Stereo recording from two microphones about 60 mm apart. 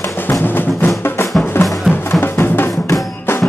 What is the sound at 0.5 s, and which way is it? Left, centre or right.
Music, left.